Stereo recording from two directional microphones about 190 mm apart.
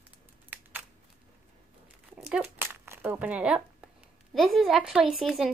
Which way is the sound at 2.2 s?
5° right (ahead or behind).